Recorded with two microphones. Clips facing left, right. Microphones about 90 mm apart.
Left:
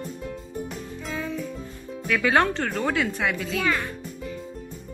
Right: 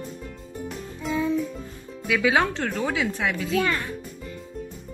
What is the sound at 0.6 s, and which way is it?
Music, centre (ahead or behind).